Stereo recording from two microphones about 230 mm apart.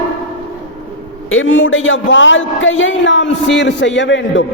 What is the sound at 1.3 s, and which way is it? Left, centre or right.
A man's voice, left.